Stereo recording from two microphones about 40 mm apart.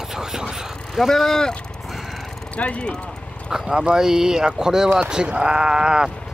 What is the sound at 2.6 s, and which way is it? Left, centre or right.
Speech, left.